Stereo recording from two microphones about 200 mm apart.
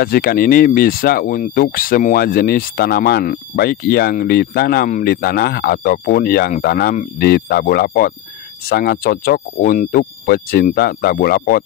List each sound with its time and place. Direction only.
0.0 s speech: 50° left (ahead or behind)